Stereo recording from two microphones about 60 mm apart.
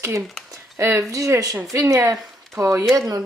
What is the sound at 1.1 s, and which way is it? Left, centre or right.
Speech, right.